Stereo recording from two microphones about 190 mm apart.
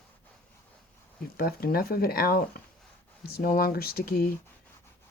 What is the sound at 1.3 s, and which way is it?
Speech, 55° left (ahead or behind).